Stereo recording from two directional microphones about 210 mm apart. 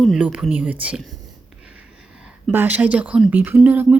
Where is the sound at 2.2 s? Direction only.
5° right (ahead or behind).